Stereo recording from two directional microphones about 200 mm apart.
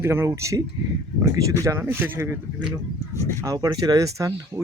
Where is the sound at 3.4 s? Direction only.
15° right (ahead or behind).